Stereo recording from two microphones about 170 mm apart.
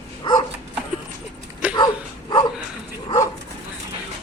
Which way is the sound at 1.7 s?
25° left (ahead or behind).